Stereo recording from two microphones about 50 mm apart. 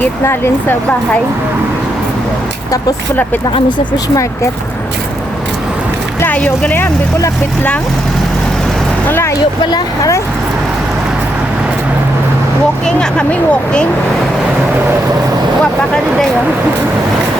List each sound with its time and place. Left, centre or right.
0.3 s speech: left
6.4 s speech: centre
12.8 s speech: centre